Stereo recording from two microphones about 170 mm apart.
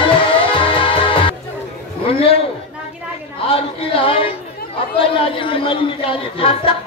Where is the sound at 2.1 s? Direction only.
35° left (ahead or behind).